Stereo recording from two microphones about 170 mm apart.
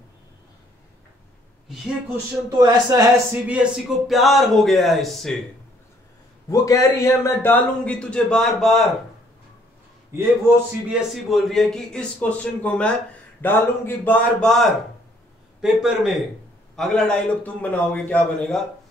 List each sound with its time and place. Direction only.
2.5 s speech: 20° right (ahead or behind)
3.4 s speech: centre (ahead or behind)
6.5 s a man's voice: 20° left (ahead or behind); by 8.8 s 5° left (ahead or behind)
10.1 s a man's voice: 15° right (ahead or behind)
11.2 s a man's voice: centre (ahead or behind)